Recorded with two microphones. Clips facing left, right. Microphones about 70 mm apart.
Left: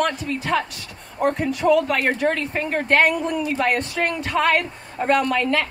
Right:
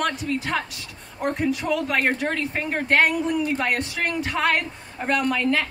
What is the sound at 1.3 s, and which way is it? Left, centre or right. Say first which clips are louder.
Speech: left 5 dB; centre.